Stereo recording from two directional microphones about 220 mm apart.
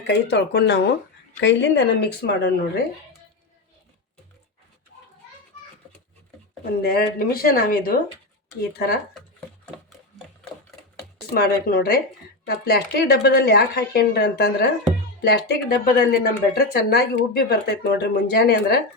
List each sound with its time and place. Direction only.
0.1 s a woman's voice: 50° left (ahead or behind)
6.7 s a woman's voice: 45° left (ahead or behind)
11.3 s a woman's voice: 45° left (ahead or behind)